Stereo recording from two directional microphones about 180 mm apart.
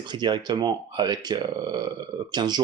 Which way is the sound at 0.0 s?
25° right (ahead or behind).